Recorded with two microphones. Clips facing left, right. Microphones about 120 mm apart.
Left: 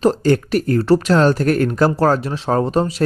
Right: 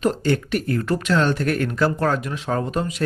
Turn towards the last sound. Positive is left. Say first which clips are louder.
# left 6 dB
turn(degrees=35)  # may be behind; listen again after turning